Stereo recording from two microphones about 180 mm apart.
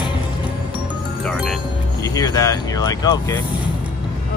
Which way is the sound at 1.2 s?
5° left (ahead or behind).